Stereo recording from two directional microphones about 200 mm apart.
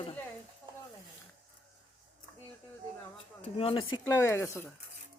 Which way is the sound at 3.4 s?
30° left (ahead or behind).